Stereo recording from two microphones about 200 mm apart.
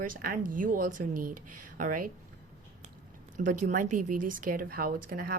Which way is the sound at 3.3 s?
40° right (ahead or behind).